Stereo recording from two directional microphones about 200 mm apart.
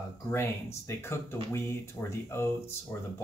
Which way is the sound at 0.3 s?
10° left (ahead or behind).